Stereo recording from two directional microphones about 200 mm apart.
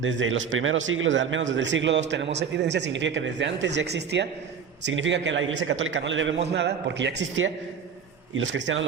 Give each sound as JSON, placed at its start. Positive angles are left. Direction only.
{"t": 0.0, "sound": "a man's voice", "side_deg": -70}